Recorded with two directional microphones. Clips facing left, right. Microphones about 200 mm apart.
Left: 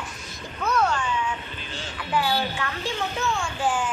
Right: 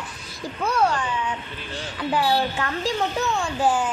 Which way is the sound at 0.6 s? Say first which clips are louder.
Right 2 dB; 30° right (ahead or behind).